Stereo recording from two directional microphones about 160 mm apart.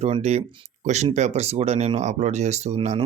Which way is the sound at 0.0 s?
45° right (ahead or behind).